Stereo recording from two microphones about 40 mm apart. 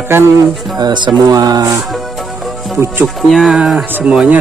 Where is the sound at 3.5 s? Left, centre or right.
Centre.